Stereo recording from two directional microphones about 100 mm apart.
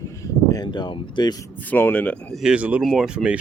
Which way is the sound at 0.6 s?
50° left (ahead or behind).